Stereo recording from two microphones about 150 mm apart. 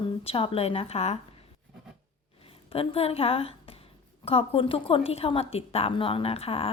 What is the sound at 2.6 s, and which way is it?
A woman's voice, 40° left (ahead or behind).